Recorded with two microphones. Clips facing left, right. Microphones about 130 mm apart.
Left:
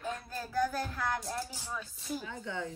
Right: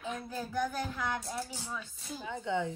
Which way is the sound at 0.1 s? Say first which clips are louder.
Right 1 dB; 15° right (ahead or behind).